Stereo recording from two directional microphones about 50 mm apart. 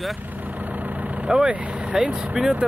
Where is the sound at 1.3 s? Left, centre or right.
Centre.